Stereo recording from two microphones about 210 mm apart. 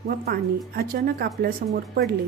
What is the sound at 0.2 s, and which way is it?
A woman's voice, 45° right (ahead or behind).